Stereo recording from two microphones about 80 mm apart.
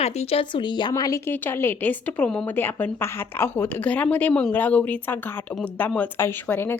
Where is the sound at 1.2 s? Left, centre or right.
Left.